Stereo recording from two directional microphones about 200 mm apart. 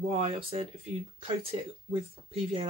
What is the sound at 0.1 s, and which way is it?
Speech, 30° right (ahead or behind).